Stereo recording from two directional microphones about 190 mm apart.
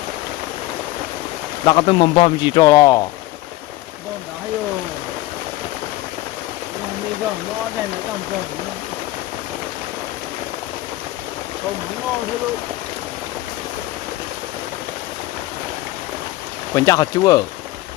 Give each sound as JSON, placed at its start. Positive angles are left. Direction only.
{"t": 1.6, "sound": "speech", "side_deg": 25}
{"t": 16.7, "sound": "speech", "side_deg": 20}